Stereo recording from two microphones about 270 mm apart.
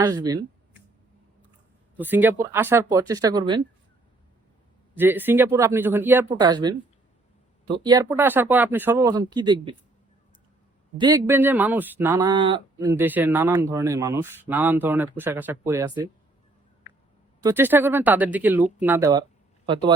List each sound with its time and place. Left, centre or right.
0.0 s speech: centre
2.0 s speech: centre
4.9 s speech: centre
10.9 s speech: centre
17.4 s speech: centre